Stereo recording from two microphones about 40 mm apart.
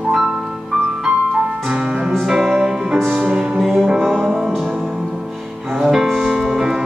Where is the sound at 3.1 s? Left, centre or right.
Right.